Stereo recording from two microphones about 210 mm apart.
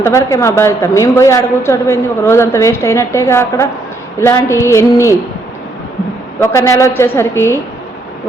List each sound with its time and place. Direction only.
0.0 s a woman's voice: 15° left (ahead or behind)
6.4 s a woman's voice: 15° left (ahead or behind)